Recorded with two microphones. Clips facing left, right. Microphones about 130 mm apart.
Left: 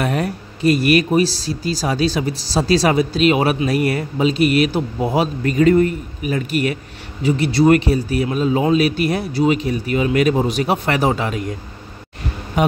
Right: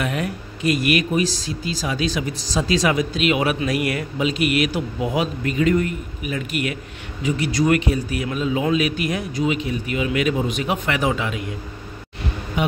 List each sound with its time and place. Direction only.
0.0 s speech: 40° left (ahead or behind)
12.6 s speech: 45° left (ahead or behind)